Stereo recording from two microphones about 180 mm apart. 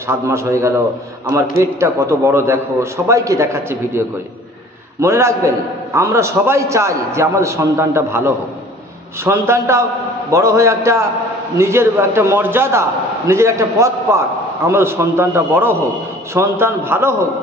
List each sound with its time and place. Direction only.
0.1 s a man's voice: 15° right (ahead or behind)